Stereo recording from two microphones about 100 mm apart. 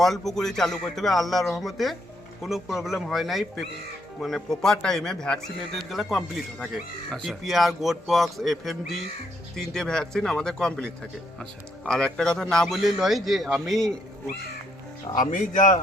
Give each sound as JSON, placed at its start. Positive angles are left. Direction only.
{"t": 0.0, "sound": "a man's voice", "side_deg": 5}
{"t": 11.9, "sound": "a man's voice", "side_deg": 5}
{"t": 15.1, "sound": "speech", "side_deg": 45}